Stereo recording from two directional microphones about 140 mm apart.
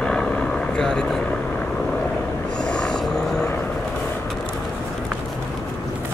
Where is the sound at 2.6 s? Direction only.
5° left (ahead or behind).